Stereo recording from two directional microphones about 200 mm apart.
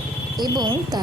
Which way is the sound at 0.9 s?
20° right (ahead or behind).